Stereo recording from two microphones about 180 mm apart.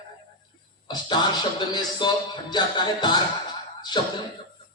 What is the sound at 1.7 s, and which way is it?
Music, 25° left (ahead or behind).